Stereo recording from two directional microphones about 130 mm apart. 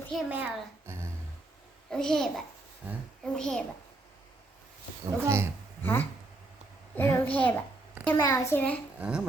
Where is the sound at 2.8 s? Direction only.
10° right (ahead or behind).